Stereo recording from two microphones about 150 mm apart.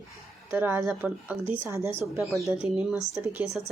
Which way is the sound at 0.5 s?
15° right (ahead or behind).